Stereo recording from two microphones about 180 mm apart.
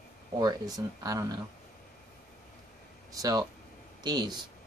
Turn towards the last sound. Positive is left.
turn(degrees=-25)  # may be behind; listen again after turning